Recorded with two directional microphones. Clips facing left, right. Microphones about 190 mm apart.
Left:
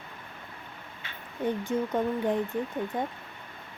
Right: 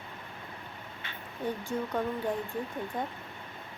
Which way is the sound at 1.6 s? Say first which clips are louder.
Left 3 dB; 20° left (ahead or behind).